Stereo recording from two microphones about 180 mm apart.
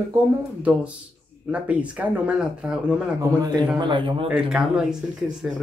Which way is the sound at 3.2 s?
20° right (ahead or behind).